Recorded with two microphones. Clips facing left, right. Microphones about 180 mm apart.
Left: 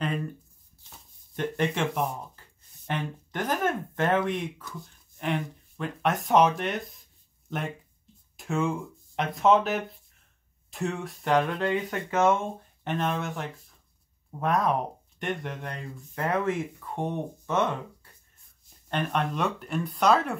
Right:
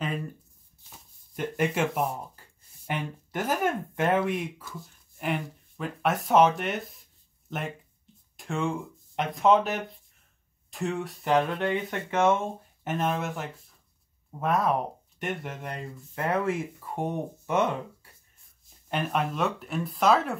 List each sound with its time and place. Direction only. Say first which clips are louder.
0.0 s shuffling cards: left 2 dB; 5° right (ahead or behind)
0.8 s a sound: even; 5° right (ahead or behind)
2.9 s speech: even; 10° right (ahead or behind)
11.6 s speech: left 1 dB; 25° right (ahead or behind)
12.8 s speech: right 1 dB; 5° right (ahead or behind)